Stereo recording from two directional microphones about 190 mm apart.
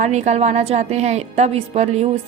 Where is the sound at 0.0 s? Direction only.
35° right (ahead or behind).